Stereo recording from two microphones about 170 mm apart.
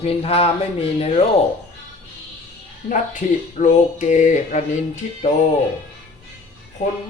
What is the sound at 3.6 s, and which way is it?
Speech, 45° left (ahead or behind).